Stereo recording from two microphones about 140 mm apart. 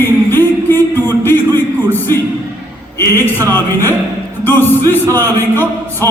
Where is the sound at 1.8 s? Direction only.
15° left (ahead or behind).